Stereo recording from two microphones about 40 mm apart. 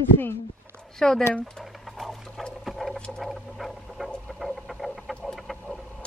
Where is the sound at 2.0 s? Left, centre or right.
Centre.